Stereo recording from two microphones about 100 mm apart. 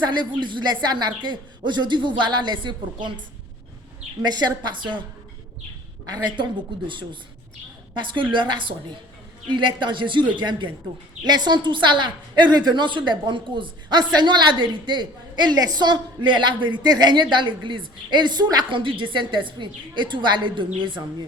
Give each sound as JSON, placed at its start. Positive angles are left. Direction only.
{"t": 0.0, "sound": "a woman's voice", "side_deg": -50}
{"t": 6.1, "sound": "a woman's voice", "side_deg": -50}